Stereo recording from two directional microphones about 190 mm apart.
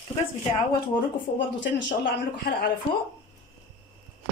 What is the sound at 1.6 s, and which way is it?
Speech, 65° left (ahead or behind).